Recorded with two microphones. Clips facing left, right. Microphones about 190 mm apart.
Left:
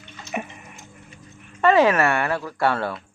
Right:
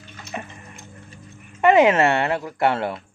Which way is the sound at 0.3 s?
15° left (ahead or behind).